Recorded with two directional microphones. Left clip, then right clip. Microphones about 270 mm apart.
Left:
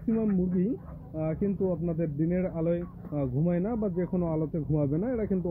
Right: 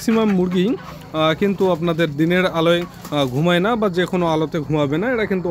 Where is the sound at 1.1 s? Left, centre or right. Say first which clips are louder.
Right 14 dB; right.